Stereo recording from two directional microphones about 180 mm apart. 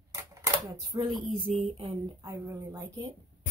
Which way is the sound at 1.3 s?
30° right (ahead or behind).